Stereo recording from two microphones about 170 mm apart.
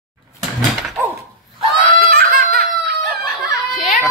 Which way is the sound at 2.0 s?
60° right (ahead or behind).